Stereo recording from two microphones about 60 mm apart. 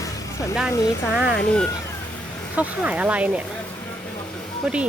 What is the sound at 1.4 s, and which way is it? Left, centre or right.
Speech, centre.